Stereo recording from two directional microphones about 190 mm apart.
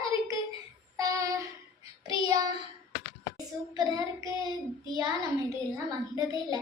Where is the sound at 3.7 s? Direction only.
20° right (ahead or behind).